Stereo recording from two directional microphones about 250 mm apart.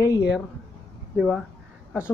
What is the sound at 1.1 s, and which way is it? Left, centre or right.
Speech, centre.